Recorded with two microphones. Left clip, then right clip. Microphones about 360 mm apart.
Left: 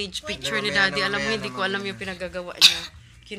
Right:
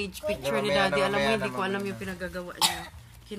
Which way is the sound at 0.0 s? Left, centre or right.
Centre.